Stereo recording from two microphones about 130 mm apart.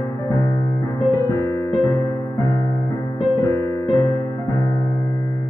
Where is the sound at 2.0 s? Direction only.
30° left (ahead or behind).